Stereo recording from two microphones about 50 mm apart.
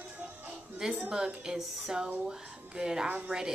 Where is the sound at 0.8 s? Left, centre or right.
Centre.